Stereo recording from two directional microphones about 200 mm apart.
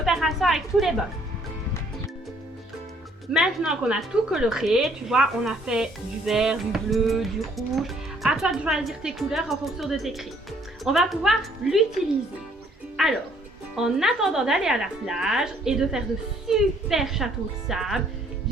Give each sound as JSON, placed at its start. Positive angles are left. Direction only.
{"t": 0.0, "sound": "a woman's voice", "side_deg": 0}
{"t": 3.3, "sound": "a woman's voice", "side_deg": -5}
{"t": 13.0, "sound": "a woman's voice", "side_deg": 0}